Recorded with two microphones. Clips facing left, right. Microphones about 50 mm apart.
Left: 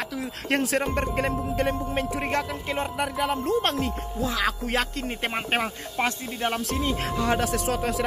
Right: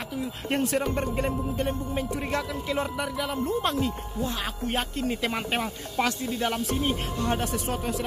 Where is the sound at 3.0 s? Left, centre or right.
Left.